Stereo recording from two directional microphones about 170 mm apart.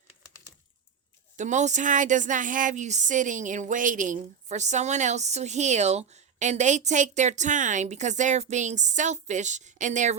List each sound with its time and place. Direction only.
1.4 s speech: 45° right (ahead or behind)